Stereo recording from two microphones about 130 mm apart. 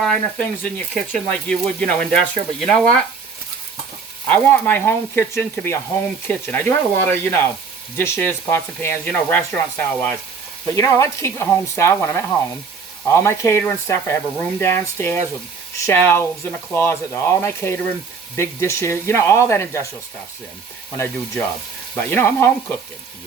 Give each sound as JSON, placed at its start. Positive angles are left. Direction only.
{"t": 0.0, "sound": "speech", "side_deg": 5}
{"t": 4.3, "sound": "speech", "side_deg": 15}
{"t": 20.9, "sound": "speech", "side_deg": 20}